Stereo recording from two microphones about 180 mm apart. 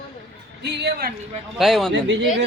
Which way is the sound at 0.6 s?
70° right (ahead or behind).